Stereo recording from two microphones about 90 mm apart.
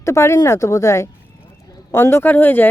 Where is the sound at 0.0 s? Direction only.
30° left (ahead or behind).